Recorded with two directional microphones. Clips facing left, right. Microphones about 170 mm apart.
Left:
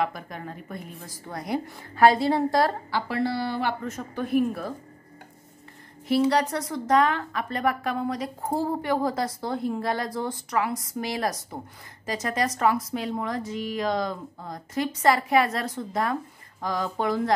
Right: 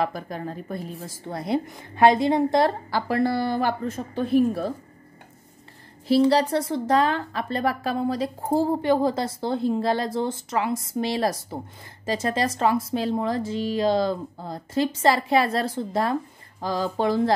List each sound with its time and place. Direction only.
0.0 s speech: 35° right (ahead or behind)
2.9 s speech: 45° right (ahead or behind)
3.8 s speech: 30° right (ahead or behind)
6.0 s speech: 30° right (ahead or behind)